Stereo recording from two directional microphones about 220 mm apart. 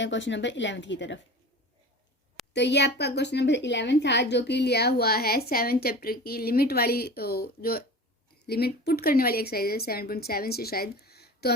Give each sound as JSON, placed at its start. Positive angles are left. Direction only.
{"t": 0.0, "sound": "speech", "side_deg": 55}
{"t": 2.5, "sound": "a woman's voice", "side_deg": 50}